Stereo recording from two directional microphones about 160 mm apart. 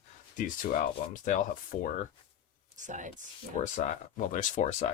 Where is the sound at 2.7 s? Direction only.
50° right (ahead or behind).